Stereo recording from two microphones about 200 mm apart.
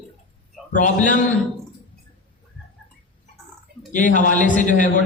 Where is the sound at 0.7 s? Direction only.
40° left (ahead or behind).